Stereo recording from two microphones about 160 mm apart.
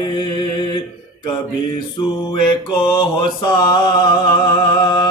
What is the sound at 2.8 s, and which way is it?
Mantra, 30° left (ahead or behind).